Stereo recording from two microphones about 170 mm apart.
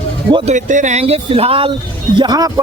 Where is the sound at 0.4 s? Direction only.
45° right (ahead or behind).